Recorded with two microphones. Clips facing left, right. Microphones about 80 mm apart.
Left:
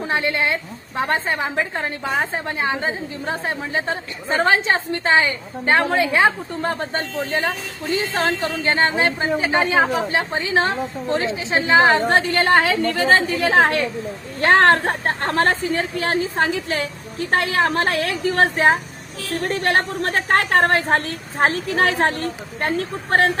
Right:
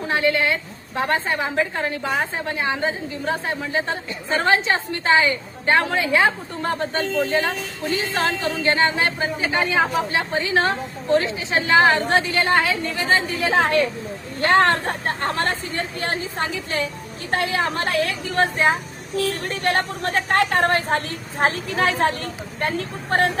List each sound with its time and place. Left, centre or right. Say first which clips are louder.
0.1 s a woman's voice: right 2 dB; left
8.6 s a woman's voice: left 1 dB; left
12.0 s a woman's voice: left 2 dB; left
15.7 s a woman's voice: left 5 dB; left